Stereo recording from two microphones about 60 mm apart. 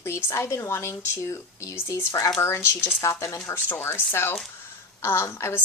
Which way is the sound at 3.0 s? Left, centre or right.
Left.